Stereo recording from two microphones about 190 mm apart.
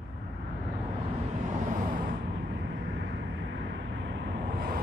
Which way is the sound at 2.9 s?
70° right (ahead or behind).